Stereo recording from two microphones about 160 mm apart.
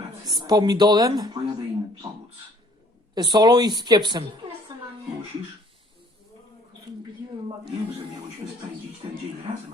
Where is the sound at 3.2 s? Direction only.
25° right (ahead or behind).